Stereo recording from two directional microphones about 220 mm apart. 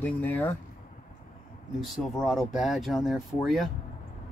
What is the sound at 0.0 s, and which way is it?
Speech, 5° left (ahead or behind).